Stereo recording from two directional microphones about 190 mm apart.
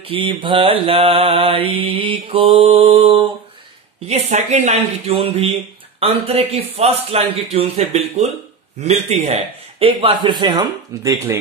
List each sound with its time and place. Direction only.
0.0 s mantra: 30° right (ahead or behind)
4.1 s a man's voice: 35° right (ahead or behind)
8.8 s mantra: 35° right (ahead or behind); by 11.3 s 15° right (ahead or behind)